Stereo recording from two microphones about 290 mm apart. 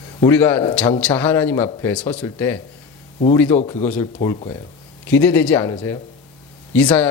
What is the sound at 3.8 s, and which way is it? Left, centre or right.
Speech, centre.